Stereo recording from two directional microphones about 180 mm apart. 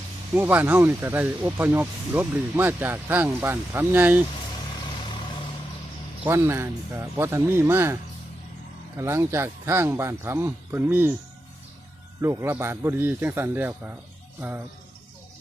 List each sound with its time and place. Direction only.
0.3 s speech: 10° right (ahead or behind)
4.9 s vehicle: 30° left (ahead or behind)
6.2 s speech: 15° right (ahead or behind)
9.0 s speech: 15° right (ahead or behind)
12.2 s speech: 15° right (ahead or behind)